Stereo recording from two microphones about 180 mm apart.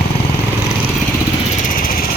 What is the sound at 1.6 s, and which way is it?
Vehicle, 50° left (ahead or behind).